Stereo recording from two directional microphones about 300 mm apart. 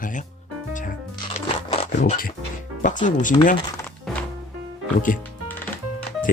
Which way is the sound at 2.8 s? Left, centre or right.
Left.